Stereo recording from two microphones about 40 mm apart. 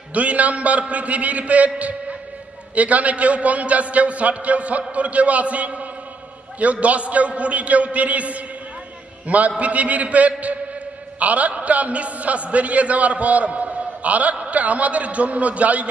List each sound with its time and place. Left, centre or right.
0.1 s a man's voice: right